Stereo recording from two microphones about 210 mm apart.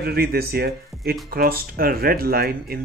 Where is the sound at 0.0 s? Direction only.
45° right (ahead or behind).